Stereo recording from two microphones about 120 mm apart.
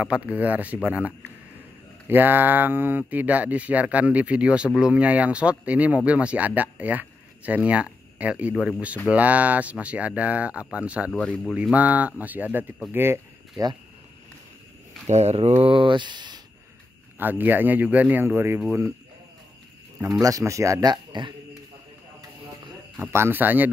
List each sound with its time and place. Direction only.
0.0 s speech: 10° right (ahead or behind)
11.1 s speech: 5° left (ahead or behind)
11.7 s speech: 15° right (ahead or behind)
15.0 s speech: 65° right (ahead or behind); by 16.3 s 40° right (ahead or behind)
17.2 s speech: 15° right (ahead or behind)
20.2 s speech: 30° right (ahead or behind)
23.1 s speech: 15° right (ahead or behind)